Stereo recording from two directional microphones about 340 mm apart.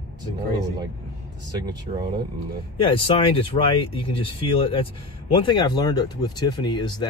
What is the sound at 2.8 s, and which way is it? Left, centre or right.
Speech, centre.